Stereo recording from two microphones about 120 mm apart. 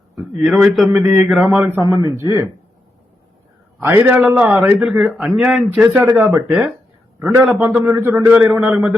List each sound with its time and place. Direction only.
0.4 s a sound: 5° right (ahead or behind)
1.5 s a man's voice: 15° right (ahead or behind)
1.8 s speech: 30° right (ahead or behind)
3.8 s a man's voice: 15° right (ahead or behind)
5.0 s a man's voice: centre (ahead or behind)